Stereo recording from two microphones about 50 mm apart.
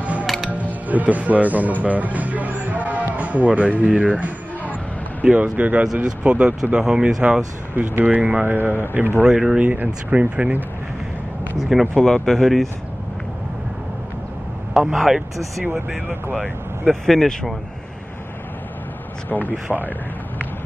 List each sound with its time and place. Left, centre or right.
0.0 s music: right
3.8 s speech: right
6.6 s speech: centre
7.7 s speech: right
9.3 s speech: centre
9.6 s speech: right
9.8 s speech: centre
11.9 s speech: centre
14.7 s speech: centre
16.8 s speech: centre
19.2 s speech: left